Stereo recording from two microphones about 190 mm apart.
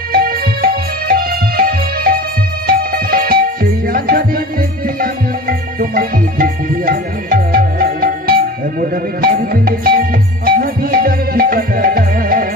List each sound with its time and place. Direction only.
0.1 s music: 50° right (ahead or behind)